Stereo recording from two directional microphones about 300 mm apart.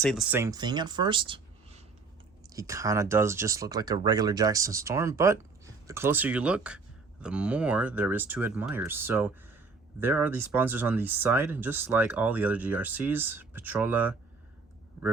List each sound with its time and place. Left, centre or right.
0.0 s speech: centre